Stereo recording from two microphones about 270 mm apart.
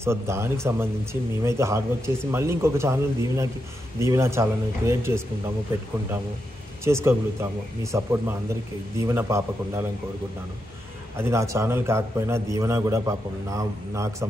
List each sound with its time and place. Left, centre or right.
0.0 s a man's voice: centre
6.8 s a man's voice: centre
11.1 s a man's voice: centre